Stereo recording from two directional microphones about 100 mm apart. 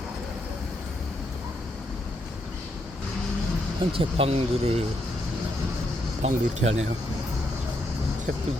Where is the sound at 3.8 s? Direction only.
70° right (ahead or behind); by 4.8 s 90° right.